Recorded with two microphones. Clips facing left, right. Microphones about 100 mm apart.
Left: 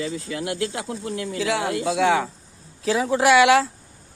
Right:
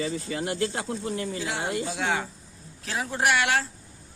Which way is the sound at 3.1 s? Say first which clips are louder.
Left 8 dB; 90° left.